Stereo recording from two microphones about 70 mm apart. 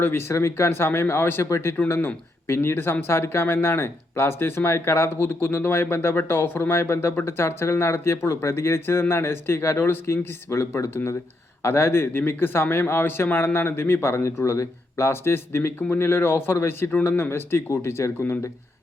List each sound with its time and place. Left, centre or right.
0.0 s speech: left
1.9 s speech: left